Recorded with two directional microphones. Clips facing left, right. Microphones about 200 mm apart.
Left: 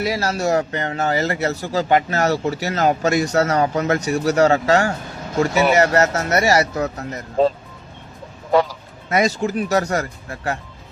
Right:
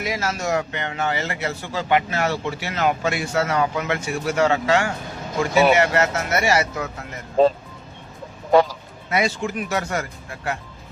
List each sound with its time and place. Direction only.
0.0 s a man's voice: 35° left (ahead or behind)
9.0 s a man's voice: 40° left (ahead or behind)